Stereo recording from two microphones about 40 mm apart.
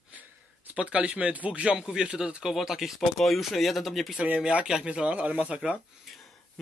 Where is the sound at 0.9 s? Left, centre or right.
Right.